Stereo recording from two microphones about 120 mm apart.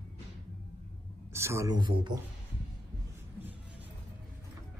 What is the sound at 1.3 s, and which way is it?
Speech, 25° right (ahead or behind).